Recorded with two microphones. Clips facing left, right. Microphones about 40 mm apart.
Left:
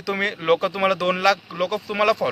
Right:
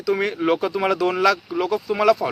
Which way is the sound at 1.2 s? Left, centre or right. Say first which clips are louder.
Right 1 dB; centre.